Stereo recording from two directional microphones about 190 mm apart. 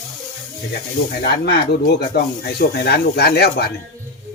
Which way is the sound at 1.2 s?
55° left (ahead or behind).